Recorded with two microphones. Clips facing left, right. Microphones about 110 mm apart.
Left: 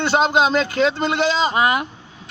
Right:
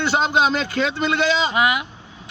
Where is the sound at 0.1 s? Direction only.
40° left (ahead or behind).